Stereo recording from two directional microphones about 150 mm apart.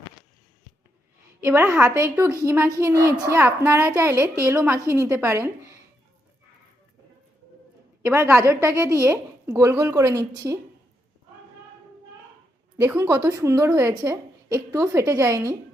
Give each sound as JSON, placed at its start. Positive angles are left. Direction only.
{"t": 1.5, "sound": "a child's voice", "side_deg": -10}
{"t": 8.0, "sound": "a child's voice", "side_deg": -15}
{"t": 12.8, "sound": "a child's voice", "side_deg": -15}